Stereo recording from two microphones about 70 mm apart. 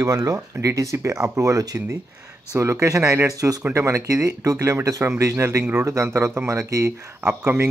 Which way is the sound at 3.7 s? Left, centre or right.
Right.